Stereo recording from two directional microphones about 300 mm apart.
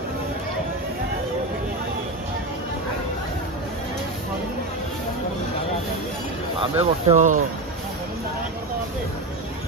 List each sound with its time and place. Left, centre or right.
6.8 s speech: right